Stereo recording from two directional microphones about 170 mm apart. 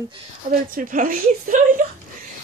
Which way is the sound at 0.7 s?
50° right (ahead or behind).